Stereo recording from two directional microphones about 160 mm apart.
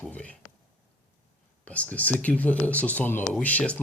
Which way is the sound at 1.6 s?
10° left (ahead or behind).